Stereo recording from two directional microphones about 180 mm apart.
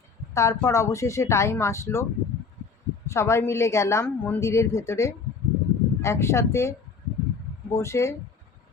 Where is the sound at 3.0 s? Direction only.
15° left (ahead or behind).